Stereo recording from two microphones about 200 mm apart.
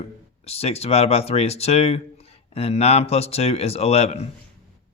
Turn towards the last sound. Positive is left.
turn(degrees=30)  # may be behind; listen again after turning